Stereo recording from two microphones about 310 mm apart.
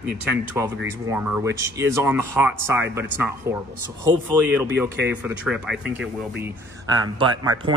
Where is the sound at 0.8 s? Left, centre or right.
Centre.